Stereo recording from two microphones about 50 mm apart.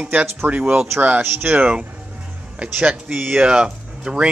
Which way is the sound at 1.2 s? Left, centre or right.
Right.